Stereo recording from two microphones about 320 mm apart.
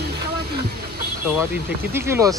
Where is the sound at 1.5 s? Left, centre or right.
Centre.